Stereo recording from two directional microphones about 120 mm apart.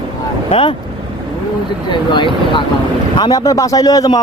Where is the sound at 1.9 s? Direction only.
40° left (ahead or behind).